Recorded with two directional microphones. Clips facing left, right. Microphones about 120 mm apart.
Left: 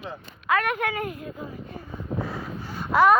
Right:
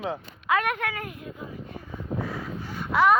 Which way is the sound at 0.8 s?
25° left (ahead or behind).